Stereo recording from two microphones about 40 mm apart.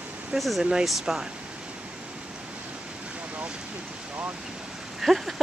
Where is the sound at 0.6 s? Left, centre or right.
Centre.